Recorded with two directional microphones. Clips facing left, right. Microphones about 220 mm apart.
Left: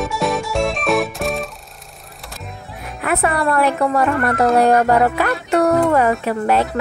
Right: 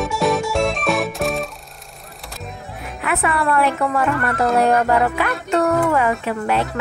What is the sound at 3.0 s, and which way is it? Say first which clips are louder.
Speech: left 2 dB; 40° left (ahead or behind).